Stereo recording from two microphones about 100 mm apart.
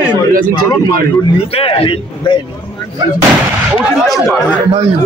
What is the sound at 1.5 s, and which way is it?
Speech, 70° left (ahead or behind).